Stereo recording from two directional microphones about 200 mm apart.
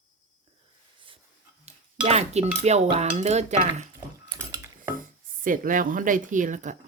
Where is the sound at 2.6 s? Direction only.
35° right (ahead or behind).